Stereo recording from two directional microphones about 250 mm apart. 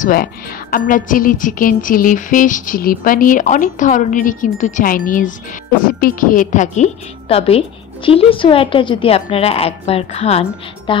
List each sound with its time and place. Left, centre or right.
0.0 s a woman's voice: left; by 11.0 s centre